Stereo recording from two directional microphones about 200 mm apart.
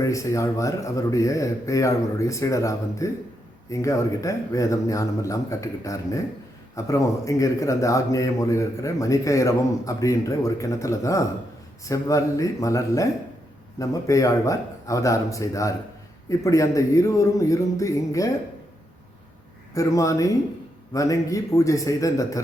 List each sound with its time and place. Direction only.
0.0 s speech: 15° left (ahead or behind)
19.7 s speech: 15° left (ahead or behind)